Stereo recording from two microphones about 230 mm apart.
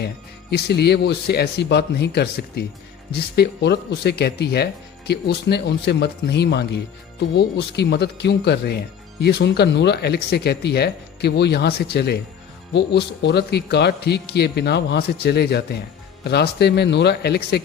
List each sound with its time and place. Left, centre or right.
0.5 s speech: left